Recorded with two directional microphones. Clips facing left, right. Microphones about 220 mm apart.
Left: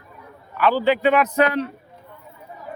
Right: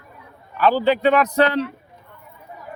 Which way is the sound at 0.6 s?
40° right (ahead or behind).